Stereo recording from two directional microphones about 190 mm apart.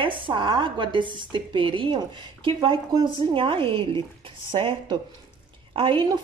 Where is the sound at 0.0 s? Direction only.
25° right (ahead or behind).